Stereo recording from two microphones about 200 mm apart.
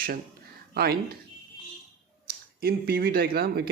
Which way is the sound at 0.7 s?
50° right (ahead or behind).